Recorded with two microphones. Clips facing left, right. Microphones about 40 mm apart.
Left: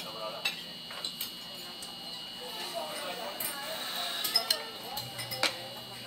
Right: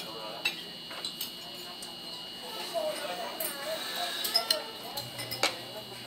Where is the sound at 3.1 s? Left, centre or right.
Centre.